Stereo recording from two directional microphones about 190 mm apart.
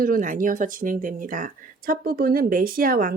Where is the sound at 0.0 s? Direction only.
45° right (ahead or behind).